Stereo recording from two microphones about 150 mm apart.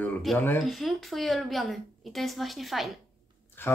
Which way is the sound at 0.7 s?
Centre (ahead or behind).